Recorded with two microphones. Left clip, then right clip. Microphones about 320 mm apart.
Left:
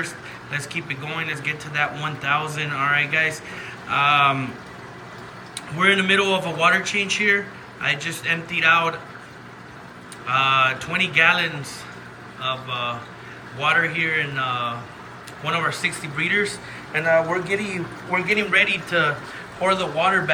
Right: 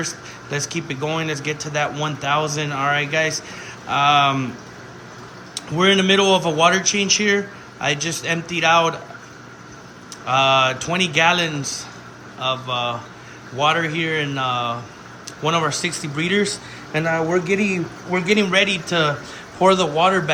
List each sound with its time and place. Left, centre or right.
0.8 s a man's voice: centre
5.7 s a man's voice: centre
10.2 s a man's voice: centre